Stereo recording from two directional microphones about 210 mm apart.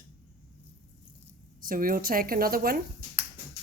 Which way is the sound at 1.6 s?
45° right (ahead or behind).